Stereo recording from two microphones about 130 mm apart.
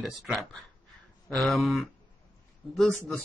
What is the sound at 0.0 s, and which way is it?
Speech, centre (ahead or behind).